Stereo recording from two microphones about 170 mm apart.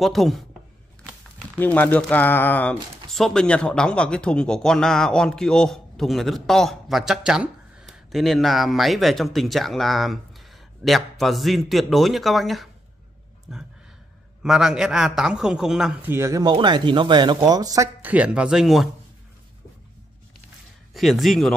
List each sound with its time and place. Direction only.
0.0 s speech: centre (ahead or behind)
1.6 s speech: 10° left (ahead or behind); by 17.8 s 20° right (ahead or behind)
18.0 s speech: 10° right (ahead or behind)
20.9 s speech: centre (ahead or behind)